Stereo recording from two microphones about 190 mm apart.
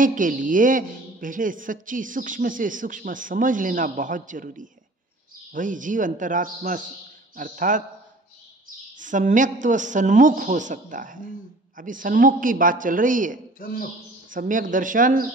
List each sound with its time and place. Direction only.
0.0 s a woman's voice: 45° right (ahead or behind)
8.9 s a woman's voice: 40° right (ahead or behind)
13.6 s a man's voice: 50° left (ahead or behind)
14.3 s a woman's voice: 45° right (ahead or behind)